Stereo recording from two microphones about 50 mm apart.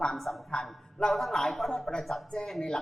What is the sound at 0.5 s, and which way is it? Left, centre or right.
A man's voice, centre.